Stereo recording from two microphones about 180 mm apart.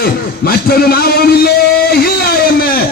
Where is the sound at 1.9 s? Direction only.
60° left (ahead or behind).